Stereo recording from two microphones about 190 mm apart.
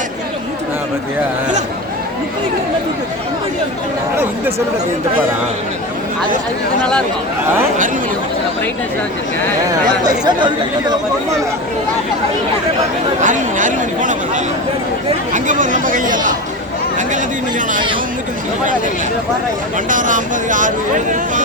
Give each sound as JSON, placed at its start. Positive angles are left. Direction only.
{"t": 10.1, "sound": "speech", "side_deg": -20}
{"t": 13.2, "sound": "speech", "side_deg": -40}
{"t": 19.9, "sound": "speech", "side_deg": -45}